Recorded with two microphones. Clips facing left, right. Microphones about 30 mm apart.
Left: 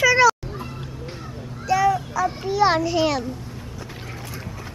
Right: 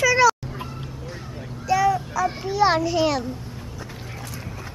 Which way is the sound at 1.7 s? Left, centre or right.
Centre.